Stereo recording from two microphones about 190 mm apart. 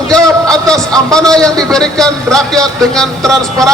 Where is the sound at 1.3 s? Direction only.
5° left (ahead or behind).